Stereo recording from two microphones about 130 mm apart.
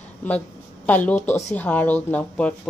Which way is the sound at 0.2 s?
10° left (ahead or behind).